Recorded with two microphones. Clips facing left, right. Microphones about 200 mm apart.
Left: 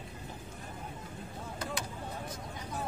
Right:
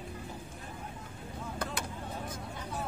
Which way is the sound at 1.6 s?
55° right (ahead or behind).